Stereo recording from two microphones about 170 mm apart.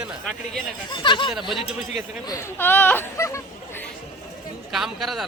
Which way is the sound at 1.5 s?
35° left (ahead or behind).